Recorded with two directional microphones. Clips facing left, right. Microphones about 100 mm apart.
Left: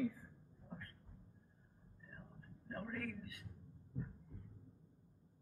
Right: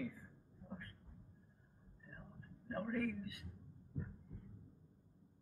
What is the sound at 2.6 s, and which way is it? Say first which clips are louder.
Speech: right 5 dB; 10° right (ahead or behind).